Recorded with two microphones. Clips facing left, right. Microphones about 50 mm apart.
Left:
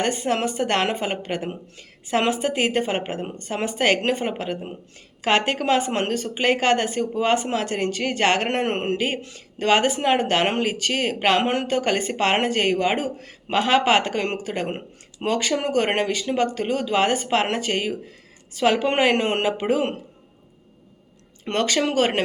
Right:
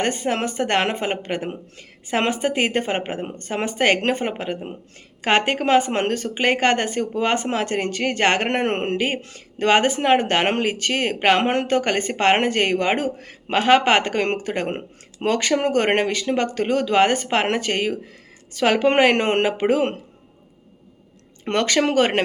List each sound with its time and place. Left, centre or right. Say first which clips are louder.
0.3 s a woman's voice: even; right
21.4 s a woman's voice: right 2 dB; right